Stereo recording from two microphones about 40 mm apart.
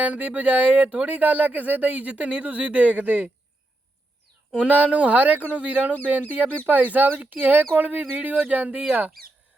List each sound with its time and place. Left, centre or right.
0.0 s speech: right
4.7 s speech: right